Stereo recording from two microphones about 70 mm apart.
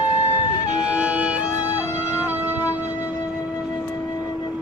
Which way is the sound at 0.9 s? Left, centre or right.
Centre.